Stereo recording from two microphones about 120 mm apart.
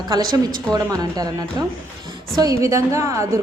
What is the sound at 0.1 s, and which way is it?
A woman's voice, 30° right (ahead or behind).